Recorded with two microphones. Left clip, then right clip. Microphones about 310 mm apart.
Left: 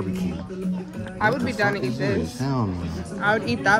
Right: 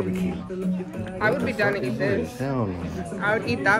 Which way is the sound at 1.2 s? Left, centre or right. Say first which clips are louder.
Left 1 dB; left.